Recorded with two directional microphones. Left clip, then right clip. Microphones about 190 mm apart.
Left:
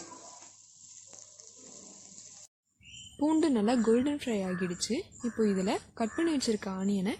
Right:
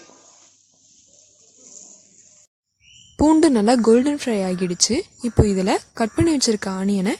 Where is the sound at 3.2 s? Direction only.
50° right (ahead or behind).